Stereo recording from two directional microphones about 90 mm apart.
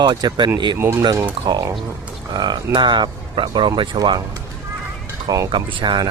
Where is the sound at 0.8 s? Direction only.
25° right (ahead or behind).